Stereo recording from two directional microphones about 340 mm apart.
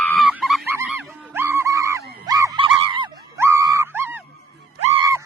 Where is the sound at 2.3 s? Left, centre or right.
Centre.